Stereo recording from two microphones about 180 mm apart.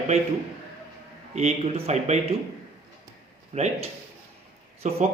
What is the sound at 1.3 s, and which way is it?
Speech, 35° right (ahead or behind).